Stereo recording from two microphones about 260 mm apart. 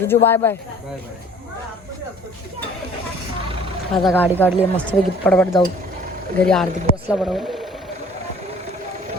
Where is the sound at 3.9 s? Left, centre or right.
Centre.